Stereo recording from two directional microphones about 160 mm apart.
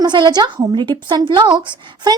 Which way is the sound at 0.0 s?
25° right (ahead or behind).